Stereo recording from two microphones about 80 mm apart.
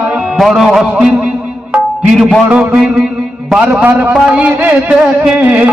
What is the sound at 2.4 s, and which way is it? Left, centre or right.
Speech, centre.